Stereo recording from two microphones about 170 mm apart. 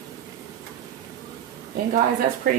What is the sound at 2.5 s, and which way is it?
Speech, 55° right (ahead or behind).